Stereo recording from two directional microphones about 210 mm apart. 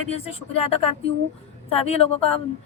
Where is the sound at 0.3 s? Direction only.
30° left (ahead or behind).